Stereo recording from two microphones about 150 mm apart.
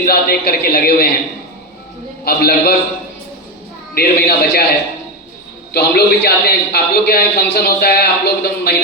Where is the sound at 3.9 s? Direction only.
90° left.